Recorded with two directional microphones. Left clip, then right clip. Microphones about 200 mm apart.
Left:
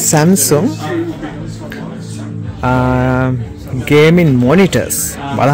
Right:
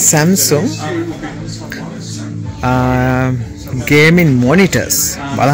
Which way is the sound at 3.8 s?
5° left (ahead or behind).